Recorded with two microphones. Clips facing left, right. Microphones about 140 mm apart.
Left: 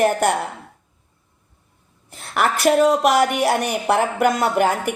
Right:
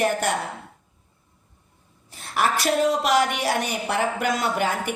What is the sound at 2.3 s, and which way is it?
Speech, 60° left (ahead or behind).